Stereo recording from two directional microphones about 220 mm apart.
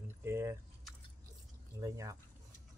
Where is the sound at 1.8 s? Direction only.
15° right (ahead or behind).